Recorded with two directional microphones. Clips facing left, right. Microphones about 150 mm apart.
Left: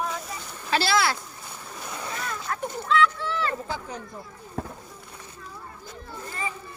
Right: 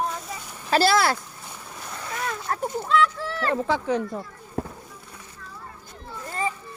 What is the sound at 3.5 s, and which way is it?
Speech, 90° right.